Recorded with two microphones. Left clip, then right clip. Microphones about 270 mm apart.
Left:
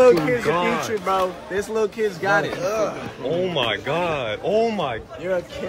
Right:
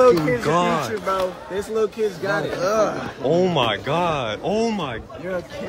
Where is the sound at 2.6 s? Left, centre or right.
Right.